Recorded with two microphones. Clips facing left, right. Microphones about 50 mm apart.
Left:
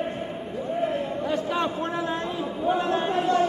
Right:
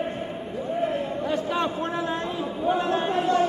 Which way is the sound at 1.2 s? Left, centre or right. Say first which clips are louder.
Even; centre.